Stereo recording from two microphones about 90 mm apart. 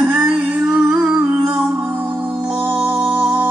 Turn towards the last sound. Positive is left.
turn(degrees=-20)  # may be behind; listen again after turning